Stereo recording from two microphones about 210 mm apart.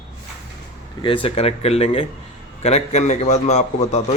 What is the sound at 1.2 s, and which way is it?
A man's voice, 30° left (ahead or behind).